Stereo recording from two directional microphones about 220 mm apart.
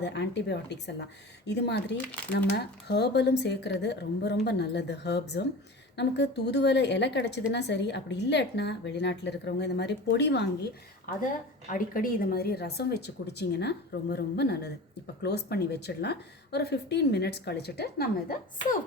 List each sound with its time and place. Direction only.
0.0 s a woman's voice: 50° left (ahead or behind)
11.7 s a woman's voice: 40° left (ahead or behind)